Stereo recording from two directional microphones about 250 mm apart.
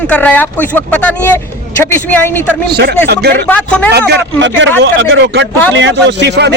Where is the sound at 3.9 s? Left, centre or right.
Right.